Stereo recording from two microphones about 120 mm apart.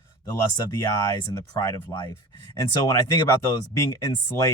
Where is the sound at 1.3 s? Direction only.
30° left (ahead or behind).